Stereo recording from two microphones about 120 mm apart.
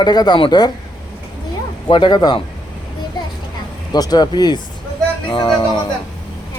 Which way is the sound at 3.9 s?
35° left (ahead or behind).